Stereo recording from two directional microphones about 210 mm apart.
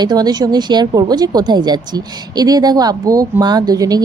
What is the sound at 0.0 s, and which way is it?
A woman's voice, 20° right (ahead or behind).